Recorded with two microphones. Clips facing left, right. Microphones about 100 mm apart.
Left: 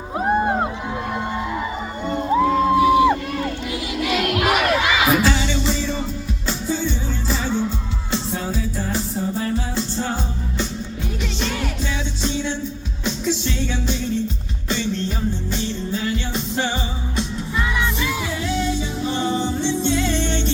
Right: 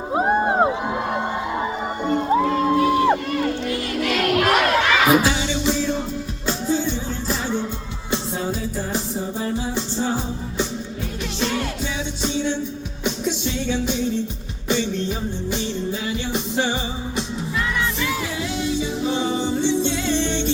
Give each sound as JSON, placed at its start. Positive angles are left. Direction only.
{"t": 0.1, "sound": "music", "side_deg": -25}
{"t": 2.4, "sound": "crowd", "side_deg": 5}
{"t": 5.1, "sound": "music", "side_deg": -10}
{"t": 13.2, "sound": "music", "side_deg": -5}
{"t": 15.4, "sound": "music", "side_deg": -15}
{"t": 19.0, "sound": "music", "side_deg": -10}